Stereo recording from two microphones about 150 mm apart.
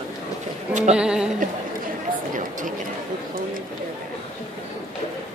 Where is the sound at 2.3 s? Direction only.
60° right (ahead or behind).